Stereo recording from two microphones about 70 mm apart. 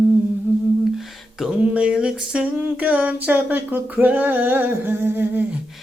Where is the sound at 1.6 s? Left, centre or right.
Centre.